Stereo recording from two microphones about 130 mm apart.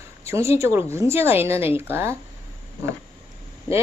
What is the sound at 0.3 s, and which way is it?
Speech, 20° right (ahead or behind).